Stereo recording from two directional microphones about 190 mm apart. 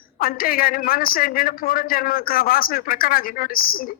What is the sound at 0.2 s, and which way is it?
A man's voice, 50° left (ahead or behind).